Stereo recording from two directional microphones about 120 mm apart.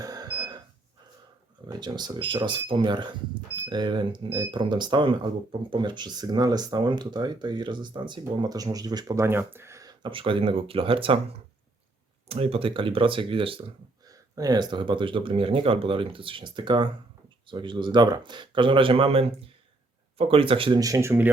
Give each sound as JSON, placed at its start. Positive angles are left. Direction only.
{"t": 0.0, "sound": "a sound", "side_deg": -35}
{"t": 1.6, "sound": "speech", "side_deg": -35}
{"t": 10.0, "sound": "speech", "side_deg": -45}
{"t": 12.3, "sound": "speech", "side_deg": -55}
{"t": 14.1, "sound": "speech", "side_deg": -30}
{"t": 20.7, "sound": "speech", "side_deg": -30}